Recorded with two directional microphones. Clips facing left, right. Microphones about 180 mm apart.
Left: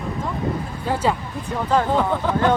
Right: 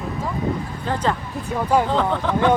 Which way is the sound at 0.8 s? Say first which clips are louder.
Left 2 dB; 10° left (ahead or behind).